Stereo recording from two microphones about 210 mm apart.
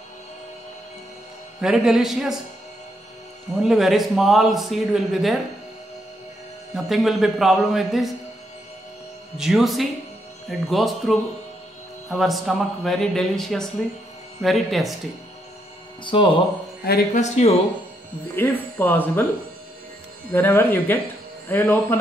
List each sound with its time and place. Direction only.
1.6 s a man's voice: centre (ahead or behind)
3.5 s a man's voice: centre (ahead or behind)
6.7 s a man's voice: centre (ahead or behind)
9.4 s a man's voice: centre (ahead or behind)
16.0 s speech: 25° left (ahead or behind)
16.8 s speech: 45° left (ahead or behind)
17.2 s speech: 30° left (ahead or behind)
18.3 s speech: 10° left (ahead or behind)
20.3 s speech: 10° left (ahead or behind)